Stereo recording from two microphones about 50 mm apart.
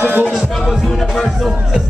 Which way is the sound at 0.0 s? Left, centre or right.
Right.